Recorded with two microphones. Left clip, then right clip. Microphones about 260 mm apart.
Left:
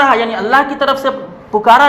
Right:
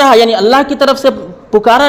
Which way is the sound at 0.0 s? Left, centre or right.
Right.